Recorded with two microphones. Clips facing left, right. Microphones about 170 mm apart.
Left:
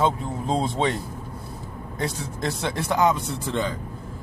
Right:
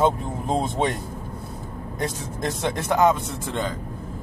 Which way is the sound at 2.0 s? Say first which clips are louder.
Even; 45° right (ahead or behind).